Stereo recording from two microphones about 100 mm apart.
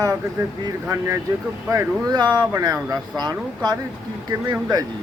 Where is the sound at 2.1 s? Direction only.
45° right (ahead or behind).